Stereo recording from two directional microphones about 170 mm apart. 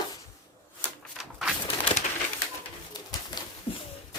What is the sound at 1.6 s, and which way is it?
Crushing, 30° left (ahead or behind).